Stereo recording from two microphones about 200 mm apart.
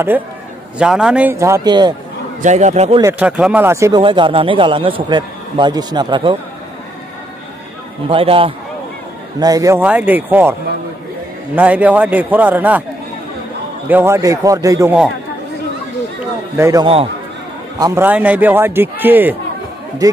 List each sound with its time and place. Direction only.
0.7 s a man's voice: 5° right (ahead or behind); by 2.0 s 20° right (ahead or behind)
2.4 s a man's voice: 35° right (ahead or behind)
3.0 s a man's voice: 10° right (ahead or behind)
4.0 s a man's voice: 25° right (ahead or behind)
8.1 s a man's voice: 25° right (ahead or behind); by 10.5 s 10° right (ahead or behind)
11.5 s a man's voice: 5° right (ahead or behind)
13.8 s a man's voice: 10° right (ahead or behind)
16.5 s a man's voice: 15° right (ahead or behind)
16.8 s a man's voice: 30° right (ahead or behind)
17.7 s a man's voice: 20° right (ahead or behind)
18.0 s a man's voice: 10° right (ahead or behind)